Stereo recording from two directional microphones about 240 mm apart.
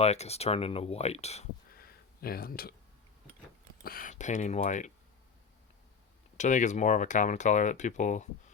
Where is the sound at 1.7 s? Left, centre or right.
Left.